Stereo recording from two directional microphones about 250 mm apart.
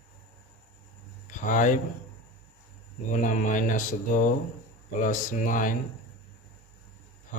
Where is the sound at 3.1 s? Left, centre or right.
Left.